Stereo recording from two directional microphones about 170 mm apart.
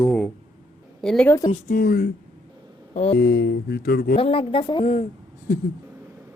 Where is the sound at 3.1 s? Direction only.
75° left (ahead or behind).